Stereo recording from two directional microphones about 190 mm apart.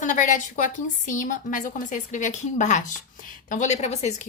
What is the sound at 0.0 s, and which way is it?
A woman's voice, 40° left (ahead or behind).